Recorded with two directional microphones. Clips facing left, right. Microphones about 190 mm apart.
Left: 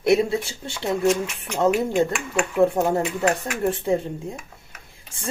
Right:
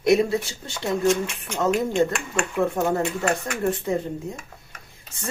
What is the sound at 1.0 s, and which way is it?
Speech, 5° left (ahead or behind).